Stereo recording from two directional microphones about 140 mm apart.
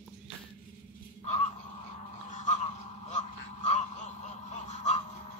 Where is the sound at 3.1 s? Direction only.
60° left (ahead or behind).